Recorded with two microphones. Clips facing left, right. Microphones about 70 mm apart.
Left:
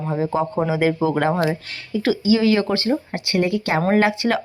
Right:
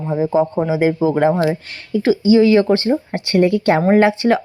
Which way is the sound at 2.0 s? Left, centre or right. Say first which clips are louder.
Right 5 dB; right.